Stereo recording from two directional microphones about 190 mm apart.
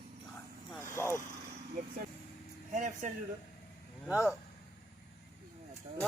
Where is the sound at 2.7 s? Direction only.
40° right (ahead or behind).